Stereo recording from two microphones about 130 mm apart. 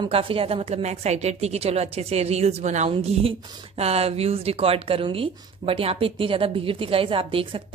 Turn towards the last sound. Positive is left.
turn(degrees=-45)  # may be behind; listen again after turning